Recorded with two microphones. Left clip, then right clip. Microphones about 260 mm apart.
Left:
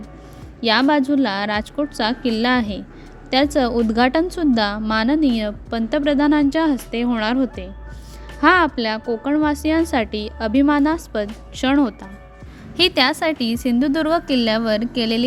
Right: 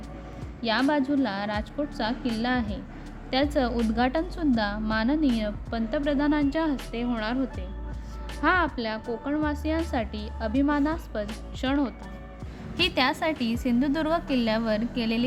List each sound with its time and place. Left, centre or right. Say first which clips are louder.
0.6 s a woman's voice: left 8 dB; left